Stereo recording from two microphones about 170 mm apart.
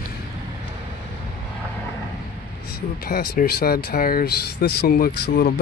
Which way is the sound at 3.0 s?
60° left (ahead or behind).